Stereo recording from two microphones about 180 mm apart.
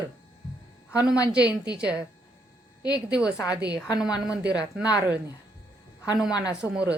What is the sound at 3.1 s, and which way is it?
Speech, 5° right (ahead or behind).